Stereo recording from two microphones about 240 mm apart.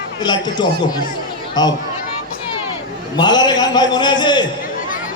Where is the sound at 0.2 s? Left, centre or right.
Centre.